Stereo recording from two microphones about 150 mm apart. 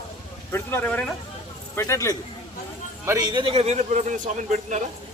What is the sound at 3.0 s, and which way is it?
Speech, 25° right (ahead or behind).